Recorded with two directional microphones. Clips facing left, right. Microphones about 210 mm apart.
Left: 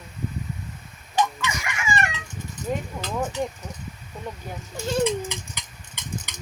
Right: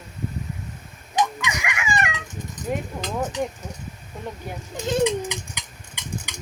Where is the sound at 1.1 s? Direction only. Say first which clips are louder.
Right 1 dB; 15° right (ahead or behind).